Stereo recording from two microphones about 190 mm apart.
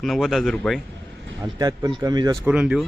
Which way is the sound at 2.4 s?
5° right (ahead or behind).